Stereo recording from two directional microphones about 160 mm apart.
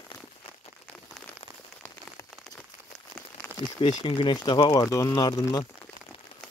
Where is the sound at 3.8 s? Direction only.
30° left (ahead or behind).